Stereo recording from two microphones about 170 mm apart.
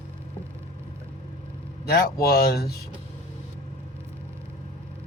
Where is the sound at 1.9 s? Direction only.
65° left (ahead or behind).